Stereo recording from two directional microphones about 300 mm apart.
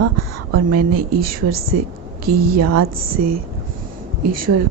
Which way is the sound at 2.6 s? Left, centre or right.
Right.